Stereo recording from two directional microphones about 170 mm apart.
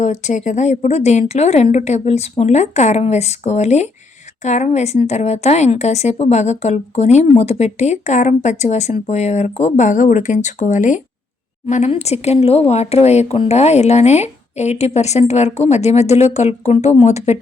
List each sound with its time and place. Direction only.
0.0 s a woman's voice: 45° left (ahead or behind)